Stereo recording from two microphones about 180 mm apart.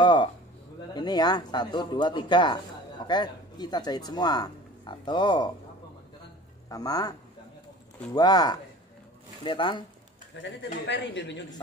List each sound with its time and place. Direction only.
0.0 s speech: 25° left (ahead or behind)
6.7 s speech: 20° left (ahead or behind)
10.3 s a man's voice: 80° left